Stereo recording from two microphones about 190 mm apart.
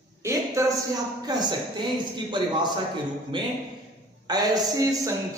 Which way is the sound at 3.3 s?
25° right (ahead or behind).